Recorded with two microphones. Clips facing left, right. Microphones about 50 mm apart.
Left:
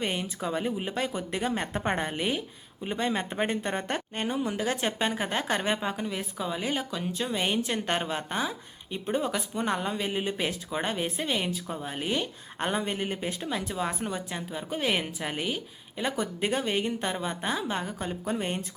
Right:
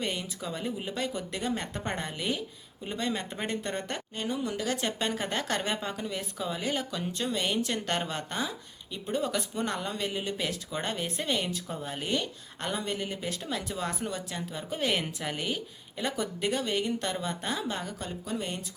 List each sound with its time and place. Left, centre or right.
0.0 s speech: left
4.4 s speech: left
7.3 s speech: left
9.2 s speech: centre
12.5 s speech: left
13.7 s speech: centre
16.4 s speech: left
18.3 s speech: left